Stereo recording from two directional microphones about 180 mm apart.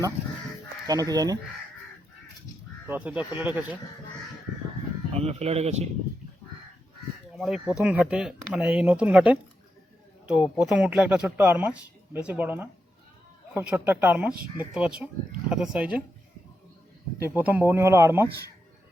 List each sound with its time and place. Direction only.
0.9 s speech: 20° right (ahead or behind)
2.8 s speech: 10° right (ahead or behind)
5.1 s a man's voice: 35° right (ahead or behind)
7.3 s speech: 5° right (ahead or behind)
17.2 s speech: 10° right (ahead or behind)